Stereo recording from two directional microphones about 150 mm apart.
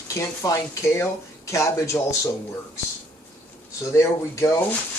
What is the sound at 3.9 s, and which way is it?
Speech, 20° left (ahead or behind).